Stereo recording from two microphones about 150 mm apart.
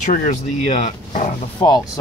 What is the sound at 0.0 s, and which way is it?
Speech, 60° left (ahead or behind).